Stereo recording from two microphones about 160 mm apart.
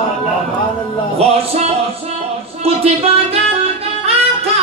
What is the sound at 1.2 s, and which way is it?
Music, 40° right (ahead or behind).